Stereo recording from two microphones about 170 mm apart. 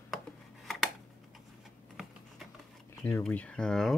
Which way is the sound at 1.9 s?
Centre (ahead or behind).